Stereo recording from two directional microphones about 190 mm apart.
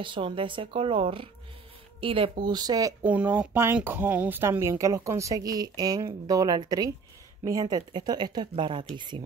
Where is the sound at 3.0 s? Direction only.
5° right (ahead or behind).